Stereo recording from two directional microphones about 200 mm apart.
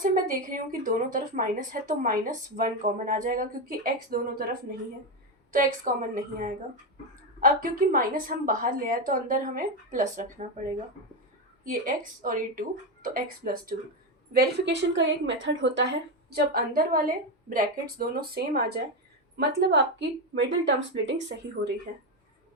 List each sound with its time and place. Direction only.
0.0 s a woman's voice: 45° right (ahead or behind)
5.5 s a woman's voice: 45° right (ahead or behind)
11.7 s a woman's voice: 40° right (ahead or behind); by 21.7 s 60° right (ahead or behind)
21.9 s a woman's voice: 40° right (ahead or behind)